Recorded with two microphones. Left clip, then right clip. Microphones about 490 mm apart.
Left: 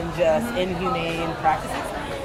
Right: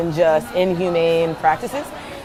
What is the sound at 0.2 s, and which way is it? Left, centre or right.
Speech, right.